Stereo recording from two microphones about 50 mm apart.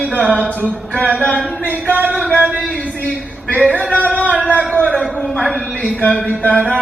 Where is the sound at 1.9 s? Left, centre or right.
Right.